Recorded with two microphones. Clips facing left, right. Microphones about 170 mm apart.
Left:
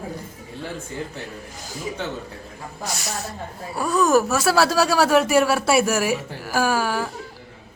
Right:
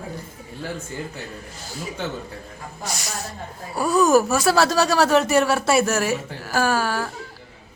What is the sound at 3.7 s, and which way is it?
Speech, centre (ahead or behind).